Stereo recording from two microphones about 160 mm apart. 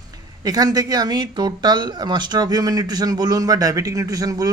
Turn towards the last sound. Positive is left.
turn(degrees=-20)  # may be behind; listen again after turning